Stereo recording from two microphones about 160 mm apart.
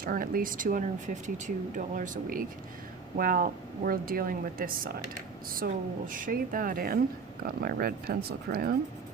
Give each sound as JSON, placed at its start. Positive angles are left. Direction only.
{"t": 0.0, "sound": "speech", "side_deg": -65}
{"t": 5.6, "sound": "speech", "side_deg": -75}
{"t": 6.1, "sound": "speech", "side_deg": -55}